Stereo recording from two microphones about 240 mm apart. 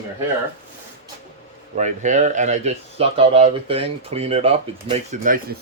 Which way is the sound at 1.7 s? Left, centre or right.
Right.